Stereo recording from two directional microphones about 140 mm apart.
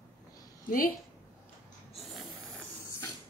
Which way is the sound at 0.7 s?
85° left.